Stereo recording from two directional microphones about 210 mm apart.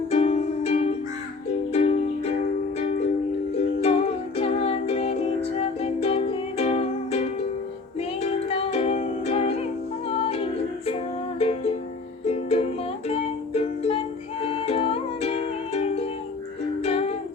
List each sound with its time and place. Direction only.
0.1 s music: 30° left (ahead or behind)